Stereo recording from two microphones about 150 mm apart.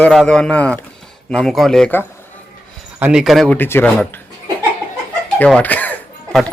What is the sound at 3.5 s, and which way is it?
Speech, 15° left (ahead or behind).